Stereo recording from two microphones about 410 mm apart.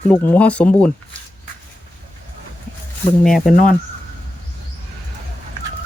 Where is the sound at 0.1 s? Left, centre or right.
Centre.